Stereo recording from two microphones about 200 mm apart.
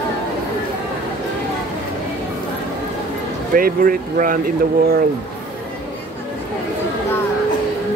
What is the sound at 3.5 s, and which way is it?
Speech, 45° right (ahead or behind).